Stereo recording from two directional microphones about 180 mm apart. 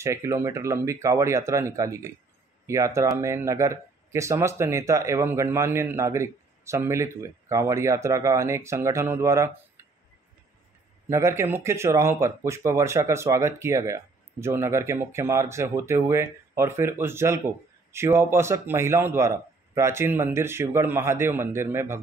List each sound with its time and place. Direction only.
0.0 s speech: 15° right (ahead or behind)
11.1 s speech: 15° right (ahead or behind)